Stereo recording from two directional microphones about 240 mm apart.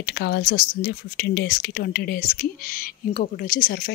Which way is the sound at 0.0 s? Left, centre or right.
Left.